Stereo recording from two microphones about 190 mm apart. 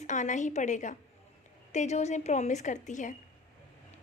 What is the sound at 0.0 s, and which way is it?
A woman's voice, 40° left (ahead or behind).